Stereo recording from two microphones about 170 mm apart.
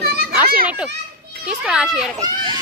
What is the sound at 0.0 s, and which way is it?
Children playing, 70° right (ahead or behind).